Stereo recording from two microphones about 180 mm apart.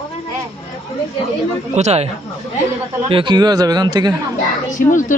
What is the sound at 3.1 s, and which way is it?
Speech, 30° right (ahead or behind).